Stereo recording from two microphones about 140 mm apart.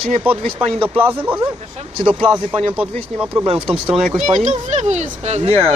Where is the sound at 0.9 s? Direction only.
15° right (ahead or behind).